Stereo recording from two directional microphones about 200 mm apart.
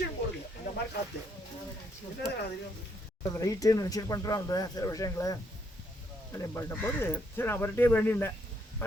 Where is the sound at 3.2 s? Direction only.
15° left (ahead or behind).